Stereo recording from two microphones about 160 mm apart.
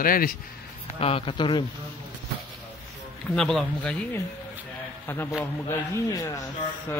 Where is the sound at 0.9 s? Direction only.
35° left (ahead or behind).